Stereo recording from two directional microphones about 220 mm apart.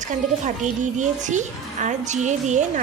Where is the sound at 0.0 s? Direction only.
35° right (ahead or behind).